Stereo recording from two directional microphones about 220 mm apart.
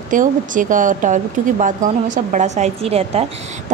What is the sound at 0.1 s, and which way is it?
A woman's voice, 35° right (ahead or behind).